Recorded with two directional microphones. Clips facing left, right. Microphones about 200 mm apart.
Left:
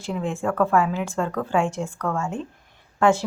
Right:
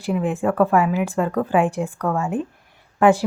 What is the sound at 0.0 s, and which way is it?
Speech, 10° right (ahead or behind).